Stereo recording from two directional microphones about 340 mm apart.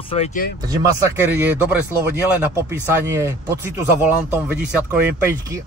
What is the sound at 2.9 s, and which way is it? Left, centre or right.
Speech, centre.